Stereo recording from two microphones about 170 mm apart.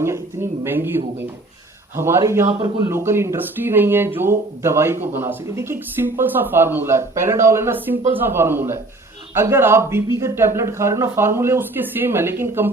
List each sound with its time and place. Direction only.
0.6 s speech: 15° right (ahead or behind)
2.5 s speech: 30° right (ahead or behind)
2.8 s speech: 15° right (ahead or behind)